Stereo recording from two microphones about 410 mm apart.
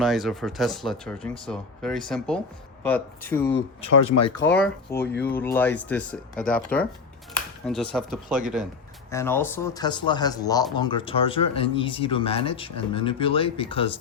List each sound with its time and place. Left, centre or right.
0.0 s speech: centre
3.9 s speech: left
4.4 s speech: centre
4.9 s speech: left
5.2 s speech: centre